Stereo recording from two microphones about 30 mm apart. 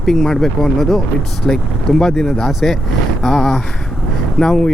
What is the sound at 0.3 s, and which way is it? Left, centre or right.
Speech, centre.